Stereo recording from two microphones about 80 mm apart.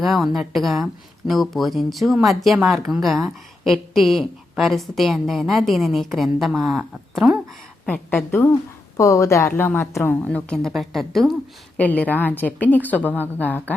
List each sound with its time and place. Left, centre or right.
0.0 s a woman's voice: centre
8.1 s a woman's voice: left
9.0 s a woman's voice: left
9.6 s a woman's voice: left
10.7 s a woman's voice: centre
11.8 s a woman's voice: centre